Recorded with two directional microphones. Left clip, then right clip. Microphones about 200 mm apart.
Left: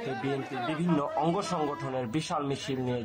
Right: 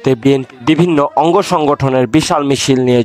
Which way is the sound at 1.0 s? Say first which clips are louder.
Right 18 dB; 55° right (ahead or behind).